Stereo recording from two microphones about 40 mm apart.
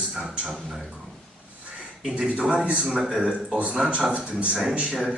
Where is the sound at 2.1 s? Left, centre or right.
Centre.